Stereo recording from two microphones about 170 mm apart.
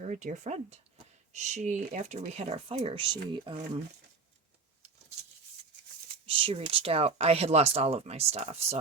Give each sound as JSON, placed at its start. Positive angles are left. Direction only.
{"t": 0.0, "sound": "speech", "side_deg": -45}
{"t": 6.2, "sound": "speech", "side_deg": -35}